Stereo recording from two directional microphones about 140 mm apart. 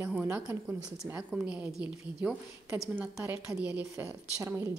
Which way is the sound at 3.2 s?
15° right (ahead or behind).